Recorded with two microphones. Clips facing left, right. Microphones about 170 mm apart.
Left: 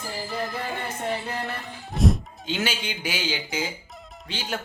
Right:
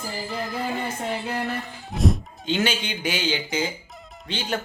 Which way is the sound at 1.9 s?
Centre (ahead or behind).